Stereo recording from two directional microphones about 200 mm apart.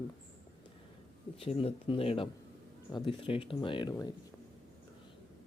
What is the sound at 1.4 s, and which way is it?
Speech, 30° left (ahead or behind).